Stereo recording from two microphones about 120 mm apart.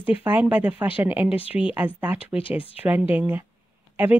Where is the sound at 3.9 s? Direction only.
15° right (ahead or behind).